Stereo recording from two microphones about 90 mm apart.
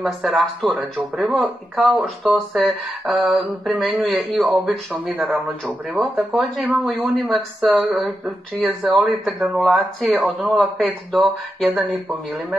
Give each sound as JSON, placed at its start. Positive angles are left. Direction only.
{"t": 0.0, "sound": "speech", "side_deg": 0}